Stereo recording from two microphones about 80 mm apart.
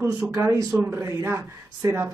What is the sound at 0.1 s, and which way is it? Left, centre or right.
Speech, right.